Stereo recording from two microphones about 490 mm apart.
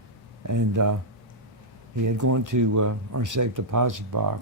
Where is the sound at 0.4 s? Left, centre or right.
Right.